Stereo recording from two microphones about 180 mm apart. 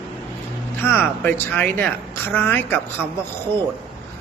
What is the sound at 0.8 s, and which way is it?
A woman's voice, 10° left (ahead or behind).